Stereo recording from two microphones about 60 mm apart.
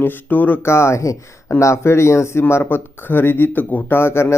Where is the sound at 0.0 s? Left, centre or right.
Left.